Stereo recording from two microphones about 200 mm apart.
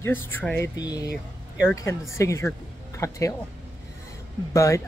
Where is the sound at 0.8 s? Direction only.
20° left (ahead or behind).